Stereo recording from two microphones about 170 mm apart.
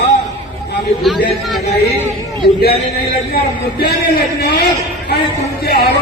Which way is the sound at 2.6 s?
65° left (ahead or behind).